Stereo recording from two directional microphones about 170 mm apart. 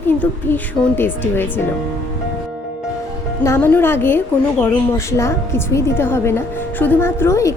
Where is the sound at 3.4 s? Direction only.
15° left (ahead or behind).